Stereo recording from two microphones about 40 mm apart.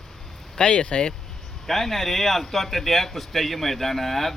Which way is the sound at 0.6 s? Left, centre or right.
Left.